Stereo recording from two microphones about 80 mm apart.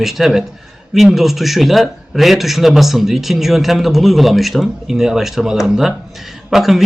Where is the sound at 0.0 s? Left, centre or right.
Centre.